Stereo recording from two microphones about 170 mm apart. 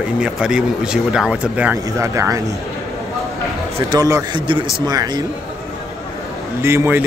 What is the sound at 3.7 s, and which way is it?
Speech, 20° right (ahead or behind).